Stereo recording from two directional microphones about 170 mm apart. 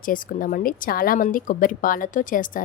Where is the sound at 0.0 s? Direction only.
55° left (ahead or behind).